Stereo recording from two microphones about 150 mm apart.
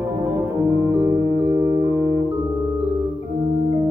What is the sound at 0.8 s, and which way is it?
Music, 25° right (ahead or behind).